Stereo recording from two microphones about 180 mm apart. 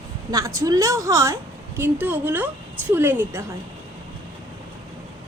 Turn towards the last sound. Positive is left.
turn(degrees=-10)  # may be behind; listen again after turning